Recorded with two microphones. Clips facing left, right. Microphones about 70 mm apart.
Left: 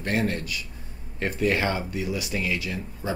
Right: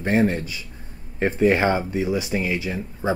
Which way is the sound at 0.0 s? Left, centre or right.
Right.